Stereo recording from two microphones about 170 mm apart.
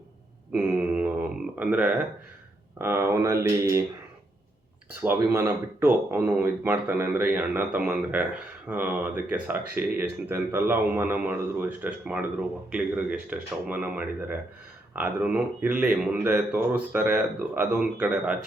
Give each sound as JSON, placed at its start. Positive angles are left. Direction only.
{"t": 0.5, "sound": "a sound", "side_deg": -10}
{"t": 1.5, "sound": "speech", "side_deg": -10}
{"t": 5.0, "sound": "speech", "side_deg": -15}